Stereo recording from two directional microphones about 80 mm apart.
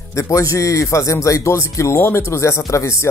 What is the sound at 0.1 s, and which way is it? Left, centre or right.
Speech, left.